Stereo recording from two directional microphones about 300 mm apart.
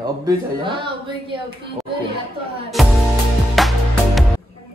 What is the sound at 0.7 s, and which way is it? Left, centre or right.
Music, centre.